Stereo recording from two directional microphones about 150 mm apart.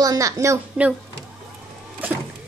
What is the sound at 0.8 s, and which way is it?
Speech, 10° right (ahead or behind).